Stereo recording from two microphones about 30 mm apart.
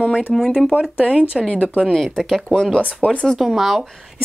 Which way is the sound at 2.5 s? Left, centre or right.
Left.